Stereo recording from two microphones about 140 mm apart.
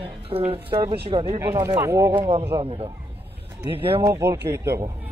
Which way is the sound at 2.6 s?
40° right (ahead or behind).